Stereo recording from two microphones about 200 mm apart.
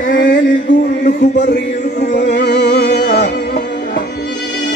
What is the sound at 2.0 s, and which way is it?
Music, 40° left (ahead or behind).